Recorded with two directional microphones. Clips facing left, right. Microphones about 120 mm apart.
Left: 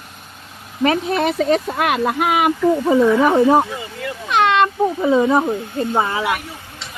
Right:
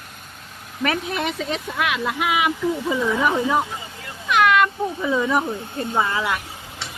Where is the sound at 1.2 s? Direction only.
40° left (ahead or behind); by 6.2 s 25° left (ahead or behind).